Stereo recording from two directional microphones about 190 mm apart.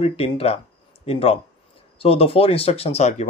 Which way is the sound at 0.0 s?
30° left (ahead or behind).